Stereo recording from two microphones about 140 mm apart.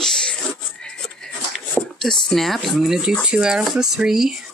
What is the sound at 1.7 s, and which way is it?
Speech, 5° left (ahead or behind).